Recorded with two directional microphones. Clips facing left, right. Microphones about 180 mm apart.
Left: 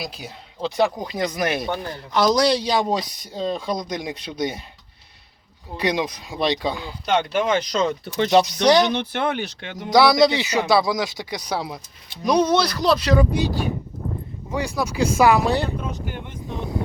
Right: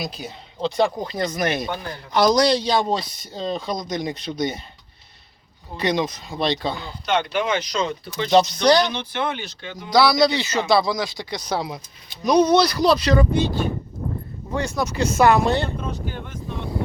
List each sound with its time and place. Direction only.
0.0 s speech: 5° left (ahead or behind)
5.7 s speech: 10° left (ahead or behind)
7.0 s speech: 45° left (ahead or behind)
8.6 s speech: 20° left (ahead or behind)
8.9 s speech: 60° left (ahead or behind)
9.9 s speech: 20° left (ahead or behind); by 13.2 s centre (ahead or behind)
14.5 s speech: 5° left (ahead or behind)